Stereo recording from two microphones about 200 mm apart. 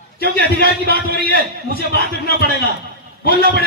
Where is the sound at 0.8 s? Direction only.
50° left (ahead or behind).